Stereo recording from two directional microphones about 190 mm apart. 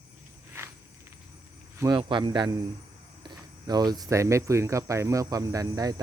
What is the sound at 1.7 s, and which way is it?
Speech, 15° right (ahead or behind).